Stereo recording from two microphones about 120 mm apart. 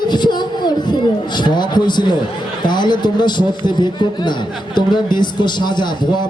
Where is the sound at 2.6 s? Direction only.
40° left (ahead or behind).